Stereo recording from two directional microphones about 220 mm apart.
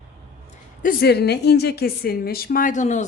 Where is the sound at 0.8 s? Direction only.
45° left (ahead or behind).